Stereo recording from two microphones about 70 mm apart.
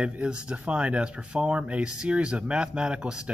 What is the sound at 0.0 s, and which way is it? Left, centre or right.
Speech, centre.